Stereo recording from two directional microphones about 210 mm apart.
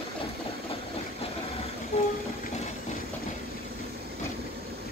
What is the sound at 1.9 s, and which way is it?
Train, 30° left (ahead or behind).